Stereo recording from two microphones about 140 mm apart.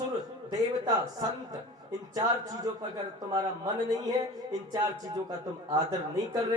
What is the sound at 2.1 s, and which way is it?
Speech, 25° right (ahead or behind).